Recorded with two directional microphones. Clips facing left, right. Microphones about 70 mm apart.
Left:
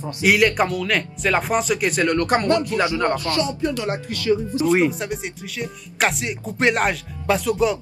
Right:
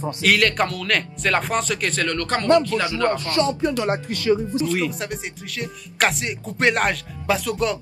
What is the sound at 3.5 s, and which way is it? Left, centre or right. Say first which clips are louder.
Speech: right 2 dB; right.